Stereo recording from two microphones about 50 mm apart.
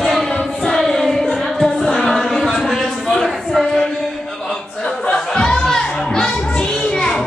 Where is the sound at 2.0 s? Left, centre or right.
Centre.